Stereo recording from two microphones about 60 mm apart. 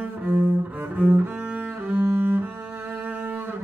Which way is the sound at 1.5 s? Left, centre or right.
Right.